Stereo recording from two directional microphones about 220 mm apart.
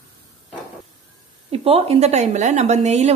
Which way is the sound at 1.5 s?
25° right (ahead or behind).